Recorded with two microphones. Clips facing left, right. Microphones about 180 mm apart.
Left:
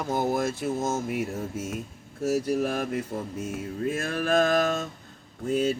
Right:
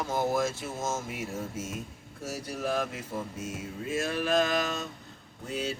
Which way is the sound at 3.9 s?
55° left (ahead or behind).